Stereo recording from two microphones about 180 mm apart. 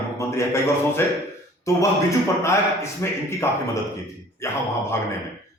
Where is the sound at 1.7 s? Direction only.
15° left (ahead or behind).